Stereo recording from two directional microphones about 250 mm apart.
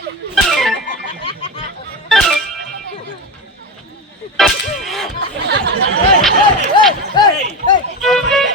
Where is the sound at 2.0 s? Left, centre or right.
Centre.